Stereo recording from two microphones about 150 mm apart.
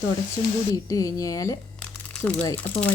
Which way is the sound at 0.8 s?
25° left (ahead or behind).